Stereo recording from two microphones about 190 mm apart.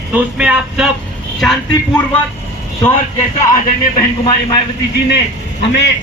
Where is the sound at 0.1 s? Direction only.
5° right (ahead or behind).